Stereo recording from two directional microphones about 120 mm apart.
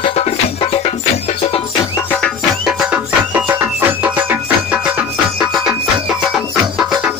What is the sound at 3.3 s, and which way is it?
Music, 15° right (ahead or behind).